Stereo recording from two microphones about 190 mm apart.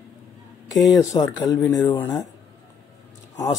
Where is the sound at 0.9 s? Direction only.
15° left (ahead or behind).